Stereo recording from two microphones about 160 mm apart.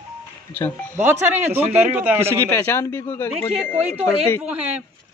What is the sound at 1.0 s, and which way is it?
Speech, 10° right (ahead or behind).